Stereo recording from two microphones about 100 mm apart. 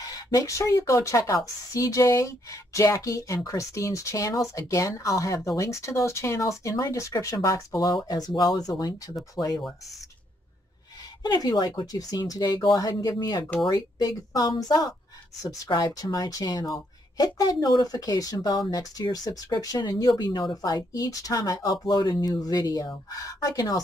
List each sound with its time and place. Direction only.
0.0 s a woman's voice: 40° left (ahead or behind)
11.2 s a woman's voice: 40° left (ahead or behind)